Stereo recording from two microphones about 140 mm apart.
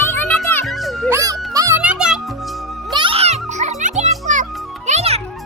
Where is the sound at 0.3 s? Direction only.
5° left (ahead or behind).